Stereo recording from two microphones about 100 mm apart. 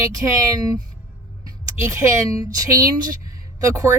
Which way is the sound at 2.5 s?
35° right (ahead or behind).